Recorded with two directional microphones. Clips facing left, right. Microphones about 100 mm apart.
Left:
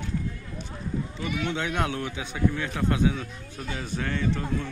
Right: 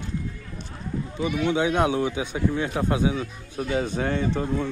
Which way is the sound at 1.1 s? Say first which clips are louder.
Right 9 dB; 15° right (ahead or behind).